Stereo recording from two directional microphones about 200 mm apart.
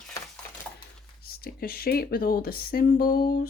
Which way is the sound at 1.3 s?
50° left (ahead or behind).